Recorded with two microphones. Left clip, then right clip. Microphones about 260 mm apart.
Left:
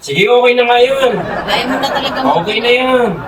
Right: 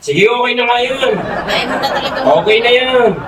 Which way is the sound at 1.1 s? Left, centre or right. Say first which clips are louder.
Even; centre.